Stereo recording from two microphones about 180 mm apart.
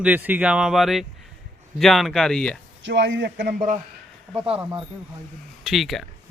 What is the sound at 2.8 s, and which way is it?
Speech, 85° right.